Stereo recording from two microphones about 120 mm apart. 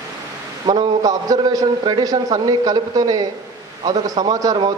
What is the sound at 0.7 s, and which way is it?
A man's voice, 35° right (ahead or behind).